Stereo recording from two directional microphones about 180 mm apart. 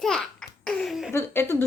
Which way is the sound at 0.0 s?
5° left (ahead or behind).